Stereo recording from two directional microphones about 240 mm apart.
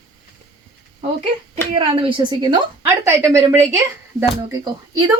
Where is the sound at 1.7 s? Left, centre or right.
Right.